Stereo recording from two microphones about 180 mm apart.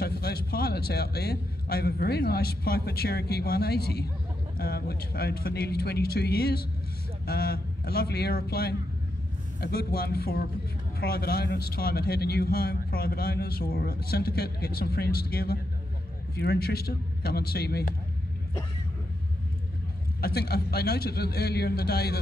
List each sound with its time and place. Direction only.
0.0 s a man's voice: 60° left (ahead or behind)
20.2 s a man's voice: 60° left (ahead or behind)